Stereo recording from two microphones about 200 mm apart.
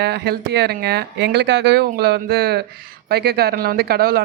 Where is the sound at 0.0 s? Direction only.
55° right (ahead or behind).